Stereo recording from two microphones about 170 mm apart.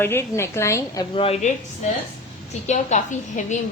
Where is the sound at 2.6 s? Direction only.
45° left (ahead or behind).